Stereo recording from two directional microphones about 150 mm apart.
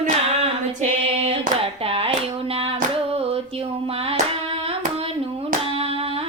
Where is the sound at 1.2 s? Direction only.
40° right (ahead or behind).